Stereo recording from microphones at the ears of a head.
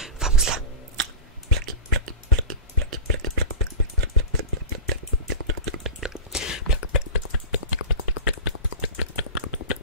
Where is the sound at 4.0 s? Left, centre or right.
Right.